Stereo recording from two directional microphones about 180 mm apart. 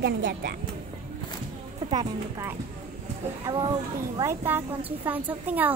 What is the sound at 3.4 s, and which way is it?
Speech, 25° right (ahead or behind).